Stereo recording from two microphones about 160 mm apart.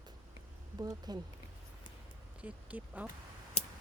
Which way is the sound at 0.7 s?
25° right (ahead or behind).